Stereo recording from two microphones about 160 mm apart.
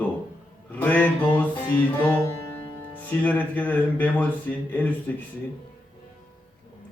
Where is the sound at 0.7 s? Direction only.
10° left (ahead or behind).